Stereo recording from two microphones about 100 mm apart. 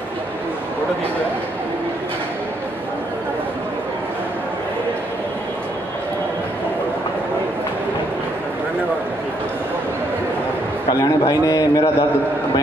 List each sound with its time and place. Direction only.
10.9 s a man's voice: 40° left (ahead or behind)